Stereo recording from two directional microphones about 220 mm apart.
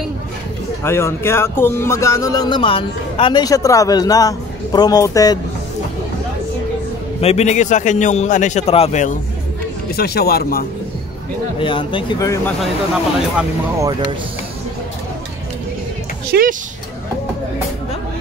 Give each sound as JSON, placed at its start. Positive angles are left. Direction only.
{"t": 0.8, "sound": "speech", "side_deg": 10}
{"t": 7.2, "sound": "a man's voice", "side_deg": 30}
{"t": 9.9, "sound": "speech", "side_deg": 45}
{"t": 11.6, "sound": "speech", "side_deg": 20}
{"t": 13.4, "sound": "speech", "side_deg": -15}
{"t": 16.3, "sound": "music", "side_deg": -40}